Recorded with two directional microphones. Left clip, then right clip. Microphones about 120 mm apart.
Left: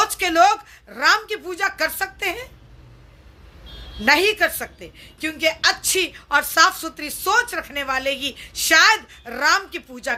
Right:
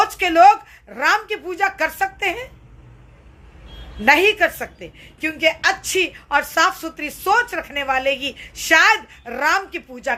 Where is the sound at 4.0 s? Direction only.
15° left (ahead or behind).